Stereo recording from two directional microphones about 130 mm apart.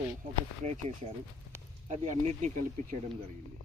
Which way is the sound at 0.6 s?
65° right (ahead or behind).